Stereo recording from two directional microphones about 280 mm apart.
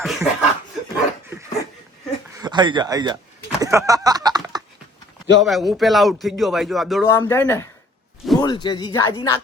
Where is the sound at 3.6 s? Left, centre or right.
Centre.